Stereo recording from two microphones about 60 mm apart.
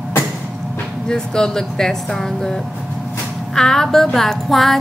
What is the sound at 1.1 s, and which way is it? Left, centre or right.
Music, centre.